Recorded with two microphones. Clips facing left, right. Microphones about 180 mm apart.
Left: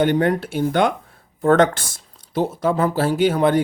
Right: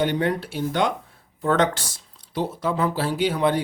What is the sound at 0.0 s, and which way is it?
Speech, 50° left (ahead or behind).